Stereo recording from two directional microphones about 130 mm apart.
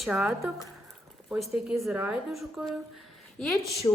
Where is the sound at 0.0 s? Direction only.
5° right (ahead or behind).